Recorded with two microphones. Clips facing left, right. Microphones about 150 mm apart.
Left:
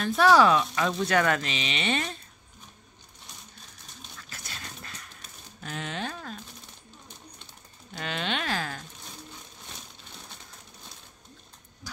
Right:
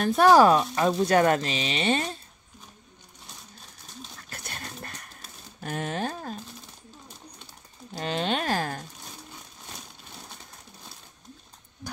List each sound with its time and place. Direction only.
0.0 s speech: 45° right (ahead or behind)
4.2 s dog: 55° right (ahead or behind)
5.2 s typewriter: 45° right (ahead or behind)
7.9 s speech: 35° right (ahead or behind)